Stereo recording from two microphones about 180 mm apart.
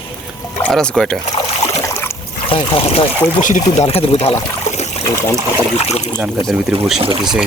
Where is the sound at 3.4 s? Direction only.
45° left (ahead or behind).